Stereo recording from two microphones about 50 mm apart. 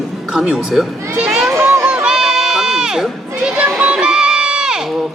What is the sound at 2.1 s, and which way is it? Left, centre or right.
Crowd, centre.